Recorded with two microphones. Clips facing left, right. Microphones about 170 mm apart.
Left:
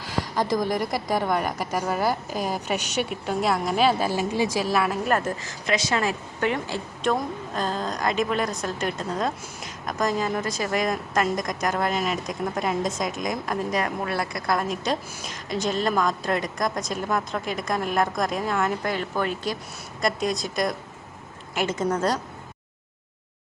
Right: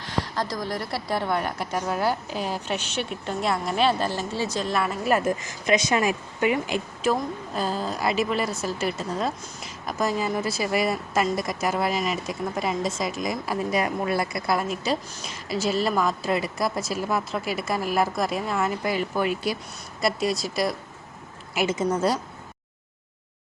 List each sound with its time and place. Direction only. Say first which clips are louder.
0.5 s a woman's voice: left 5 dB; 20° left (ahead or behind); by 5.3 s 5° right (ahead or behind)
5.4 s a woman's voice: right 3 dB; 20° right (ahead or behind)